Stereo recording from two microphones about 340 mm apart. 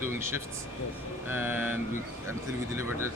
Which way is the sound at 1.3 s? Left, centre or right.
Centre.